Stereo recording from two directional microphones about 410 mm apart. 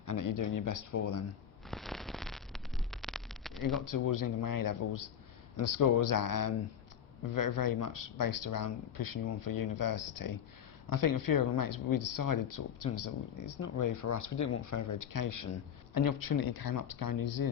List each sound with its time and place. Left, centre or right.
0.0 s speech: left
1.7 s a sound: centre
3.8 s speech: left